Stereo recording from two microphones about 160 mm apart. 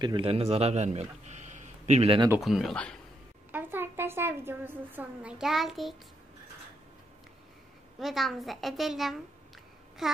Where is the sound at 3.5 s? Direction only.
15° right (ahead or behind).